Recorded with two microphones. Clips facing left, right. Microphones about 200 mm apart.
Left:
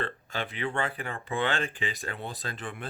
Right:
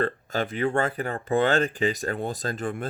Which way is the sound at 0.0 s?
45° right (ahead or behind).